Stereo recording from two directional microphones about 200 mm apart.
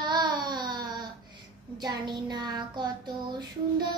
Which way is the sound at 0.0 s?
20° right (ahead or behind).